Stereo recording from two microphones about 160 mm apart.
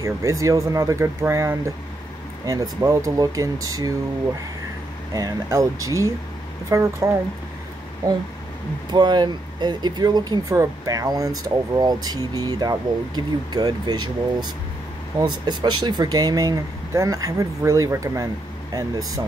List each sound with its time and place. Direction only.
0.0 s speech: 20° right (ahead or behind)
5.1 s speech: 20° right (ahead or behind)
8.9 s speech: 25° right (ahead or behind)
15.1 s speech: 25° right (ahead or behind)